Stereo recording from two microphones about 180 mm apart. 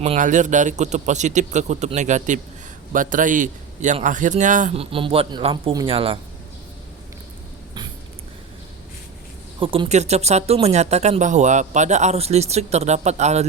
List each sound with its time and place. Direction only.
0.0 s a man's voice: 40° right (ahead or behind)
9.6 s speech: 30° right (ahead or behind)